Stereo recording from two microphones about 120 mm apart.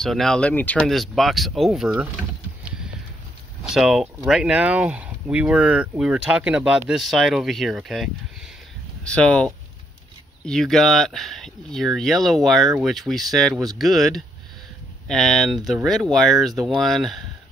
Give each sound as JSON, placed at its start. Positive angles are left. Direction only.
{"t": 0.0, "sound": "speech", "side_deg": 5}
{"t": 0.8, "sound": "speech", "side_deg": 0}
{"t": 3.6, "sound": "speech", "side_deg": -5}